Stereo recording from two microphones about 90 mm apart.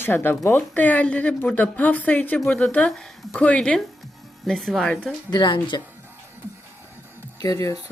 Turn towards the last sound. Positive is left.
turn(degrees=40)  # may be behind; listen again after turning